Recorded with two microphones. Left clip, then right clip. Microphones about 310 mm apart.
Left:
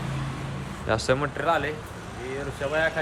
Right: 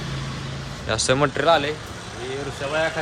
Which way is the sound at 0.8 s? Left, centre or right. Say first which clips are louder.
Right 3 dB; centre.